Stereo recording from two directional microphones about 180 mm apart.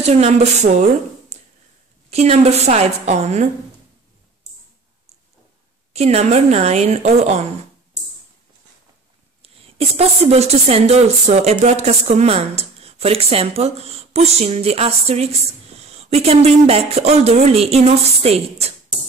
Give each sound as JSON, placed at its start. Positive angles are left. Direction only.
{"t": 0.0, "sound": "speech", "side_deg": -35}
{"t": 1.3, "sound": "a sound", "side_deg": -40}
{"t": 2.0, "sound": "speech", "side_deg": -35}
{"t": 5.9, "sound": "speech", "side_deg": -35}
{"t": 9.4, "sound": "a woman's voice", "side_deg": -35}